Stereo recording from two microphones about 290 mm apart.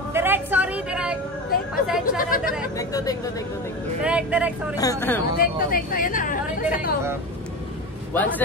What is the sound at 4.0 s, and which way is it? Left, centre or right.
Speech, centre.